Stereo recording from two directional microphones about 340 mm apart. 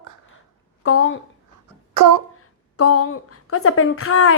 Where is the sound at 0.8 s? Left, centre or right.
Left.